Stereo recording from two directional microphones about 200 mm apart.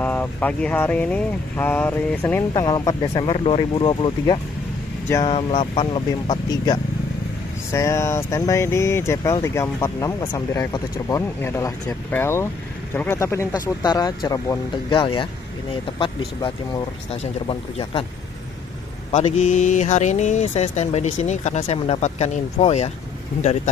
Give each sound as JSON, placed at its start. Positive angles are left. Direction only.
{"t": 0.0, "sound": "speech", "side_deg": 10}
{"t": 19.1, "sound": "speech", "side_deg": 35}